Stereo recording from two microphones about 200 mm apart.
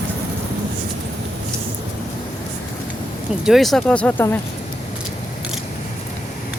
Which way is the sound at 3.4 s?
Centre (ahead or behind).